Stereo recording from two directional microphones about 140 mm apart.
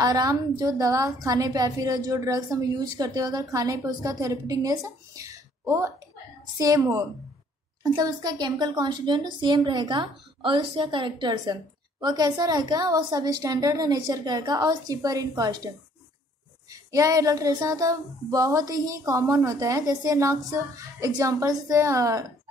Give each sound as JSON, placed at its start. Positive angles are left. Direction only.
{"t": 0.0, "sound": "a woman's voice", "side_deg": -25}
{"t": 16.7, "sound": "a woman's voice", "side_deg": -25}